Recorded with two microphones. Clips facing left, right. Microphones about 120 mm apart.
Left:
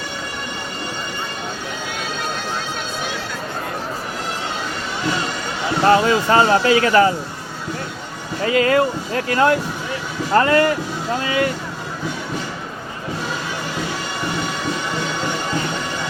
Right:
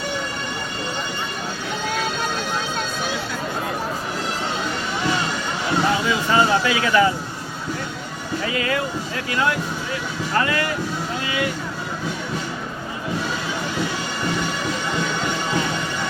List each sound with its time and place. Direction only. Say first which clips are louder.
5.8 s speech: left 10 dB; 70° left (ahead or behind)
6.1 s speech: left 4 dB; 45° left (ahead or behind)
8.5 s speech: left 10 dB; 45° left (ahead or behind)